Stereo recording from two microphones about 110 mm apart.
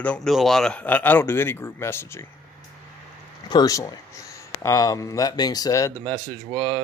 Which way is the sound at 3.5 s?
35° left (ahead or behind).